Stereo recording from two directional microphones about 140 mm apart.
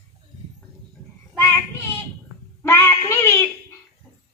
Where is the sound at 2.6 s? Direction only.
20° left (ahead or behind).